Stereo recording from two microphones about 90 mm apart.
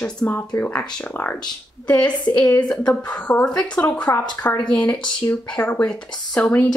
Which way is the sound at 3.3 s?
15° left (ahead or behind).